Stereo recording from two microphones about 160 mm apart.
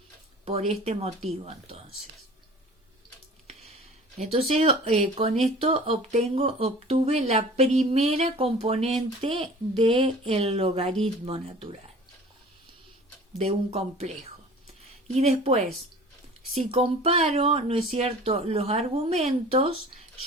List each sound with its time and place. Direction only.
0.7 s speech: 40° right (ahead or behind)
4.2 s speech: 40° right (ahead or behind)
13.4 s speech: 40° right (ahead or behind)